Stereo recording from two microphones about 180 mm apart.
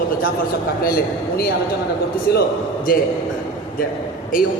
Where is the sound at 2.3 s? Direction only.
65° left (ahead or behind).